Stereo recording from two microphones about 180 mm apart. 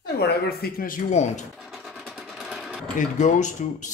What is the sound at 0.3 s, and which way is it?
Speech, 60° left (ahead or behind).